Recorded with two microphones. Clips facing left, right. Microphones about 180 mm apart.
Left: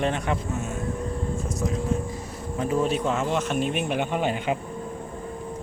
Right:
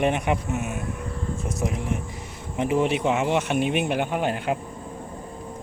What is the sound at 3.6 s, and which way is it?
Speech, 65° right (ahead or behind).